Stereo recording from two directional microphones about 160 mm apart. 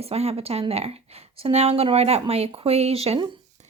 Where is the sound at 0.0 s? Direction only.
40° right (ahead or behind).